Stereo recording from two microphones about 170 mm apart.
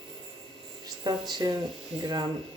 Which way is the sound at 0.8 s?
25° right (ahead or behind).